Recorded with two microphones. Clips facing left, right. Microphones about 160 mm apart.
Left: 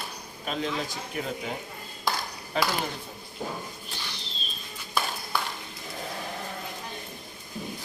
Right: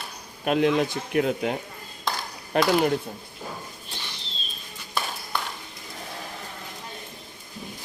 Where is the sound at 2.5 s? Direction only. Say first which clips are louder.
Right 5 dB; 60° right (ahead or behind).